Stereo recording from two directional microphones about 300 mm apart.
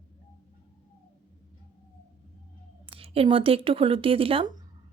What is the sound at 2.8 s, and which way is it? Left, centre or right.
A woman's voice, centre.